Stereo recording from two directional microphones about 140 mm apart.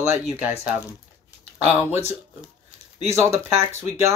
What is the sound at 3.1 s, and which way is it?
Speech, 20° right (ahead or behind).